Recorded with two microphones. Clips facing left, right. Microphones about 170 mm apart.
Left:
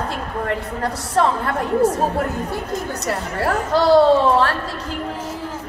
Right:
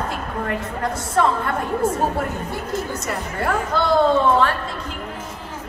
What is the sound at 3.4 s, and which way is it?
A woman's voice, 35° left (ahead or behind).